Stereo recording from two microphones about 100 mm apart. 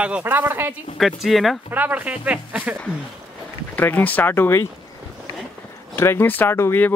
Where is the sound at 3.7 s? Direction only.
20° left (ahead or behind).